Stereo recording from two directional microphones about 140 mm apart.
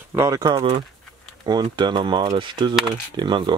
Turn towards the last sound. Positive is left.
turn(degrees=-30)  # may be behind; listen again after turning